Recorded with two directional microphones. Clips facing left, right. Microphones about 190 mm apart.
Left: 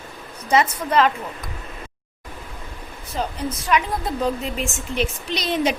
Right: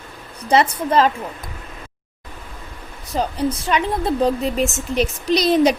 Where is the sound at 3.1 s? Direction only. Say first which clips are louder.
Right 5 dB; 40° right (ahead or behind).